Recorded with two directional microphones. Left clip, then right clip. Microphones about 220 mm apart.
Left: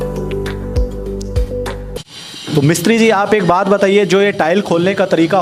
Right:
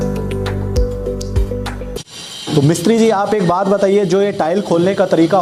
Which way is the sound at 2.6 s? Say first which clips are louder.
Left 1 dB; 10° left (ahead or behind).